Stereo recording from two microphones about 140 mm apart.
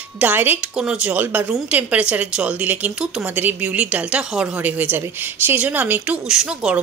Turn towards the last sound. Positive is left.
turn(degrees=-5)  # may be behind; listen again after turning